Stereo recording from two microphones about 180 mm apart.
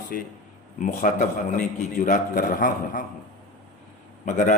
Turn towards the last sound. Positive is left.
turn(degrees=45)  # may be behind; listen again after turning